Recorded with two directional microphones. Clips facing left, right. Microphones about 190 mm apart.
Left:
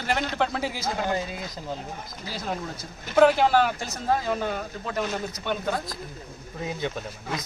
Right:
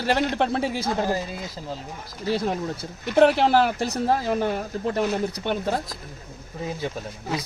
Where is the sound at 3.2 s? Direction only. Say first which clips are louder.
Right 1 dB; 35° right (ahead or behind).